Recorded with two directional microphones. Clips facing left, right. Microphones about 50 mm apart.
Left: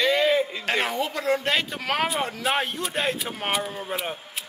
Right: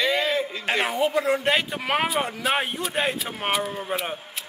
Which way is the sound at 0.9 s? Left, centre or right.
Right.